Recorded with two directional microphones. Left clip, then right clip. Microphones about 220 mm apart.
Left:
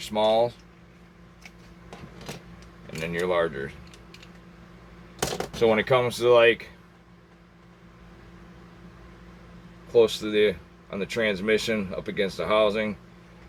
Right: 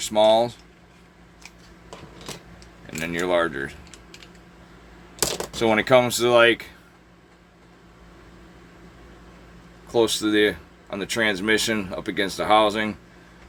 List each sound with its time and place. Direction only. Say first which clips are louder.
0.1 s speech: right 4 dB; 50° right (ahead or behind)
3.1 s speech: right 3 dB; 50° right (ahead or behind)
5.5 s speech: right 3 dB; 50° right (ahead or behind)
9.9 s speech: even; 50° right (ahead or behind)